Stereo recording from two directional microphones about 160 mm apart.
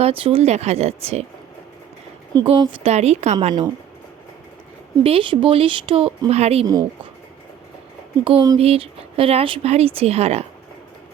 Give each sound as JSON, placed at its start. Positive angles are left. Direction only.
{"t": 0.0, "sound": "speech", "side_deg": -35}
{"t": 2.3, "sound": "speech", "side_deg": -30}
{"t": 5.0, "sound": "speech", "side_deg": -35}
{"t": 6.7, "sound": "speech", "side_deg": -25}
{"t": 8.2, "sound": "speech", "side_deg": -35}